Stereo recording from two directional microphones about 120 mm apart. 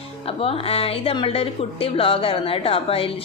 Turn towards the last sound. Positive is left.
turn(degrees=50)  # may be behind; listen again after turning